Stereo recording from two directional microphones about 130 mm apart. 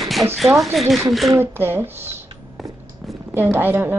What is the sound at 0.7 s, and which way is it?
Speech, centre (ahead or behind).